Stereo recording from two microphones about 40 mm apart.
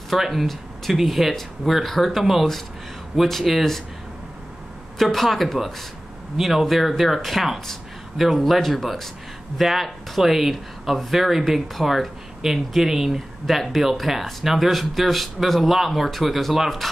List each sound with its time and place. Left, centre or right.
0.1 s speech: centre
4.9 s speech: centre
9.6 s speech: centre